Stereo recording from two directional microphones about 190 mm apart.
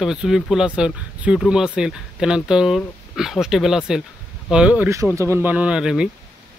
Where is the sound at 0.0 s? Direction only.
5° right (ahead or behind).